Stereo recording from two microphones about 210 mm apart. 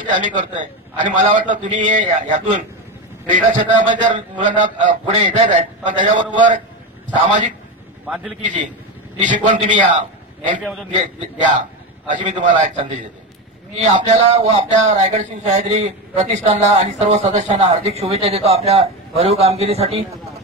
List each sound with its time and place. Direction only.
0.2 s a man's voice: 35° right (ahead or behind)
7.2 s a man's voice: 35° right (ahead or behind)
8.1 s a man's voice: 5° right (ahead or behind)
9.2 s a man's voice: 35° right (ahead or behind)
10.6 s a man's voice: centre (ahead or behind)
10.9 s a man's voice: 35° right (ahead or behind)
12.4 s speech: 20° right (ahead or behind)
12.6 s a man's voice: 35° right (ahead or behind)